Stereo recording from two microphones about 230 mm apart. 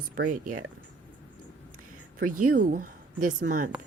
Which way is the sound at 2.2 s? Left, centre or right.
Right.